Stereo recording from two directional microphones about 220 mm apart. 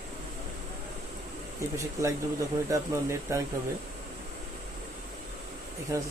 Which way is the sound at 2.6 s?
15° right (ahead or behind).